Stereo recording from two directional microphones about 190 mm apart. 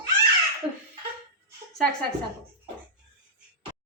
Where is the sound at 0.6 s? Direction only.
30° right (ahead or behind).